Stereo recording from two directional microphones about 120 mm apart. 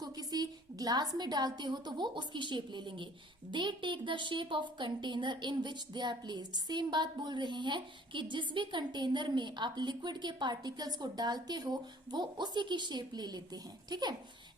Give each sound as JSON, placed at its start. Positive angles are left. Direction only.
{"t": 0.0, "sound": "a woman's voice", "side_deg": -35}